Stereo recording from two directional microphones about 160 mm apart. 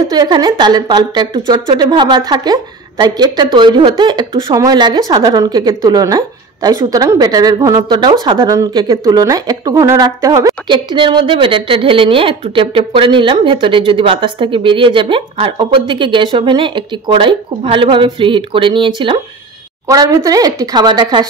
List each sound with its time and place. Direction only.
0.1 s a woman's voice: 25° right (ahead or behind)
19.9 s a woman's voice: 20° right (ahead or behind)